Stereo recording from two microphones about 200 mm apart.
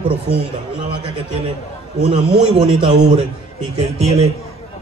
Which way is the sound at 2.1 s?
25° right (ahead or behind).